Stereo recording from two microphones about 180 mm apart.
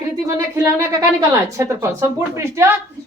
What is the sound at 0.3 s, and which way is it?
Speech, 15° right (ahead or behind).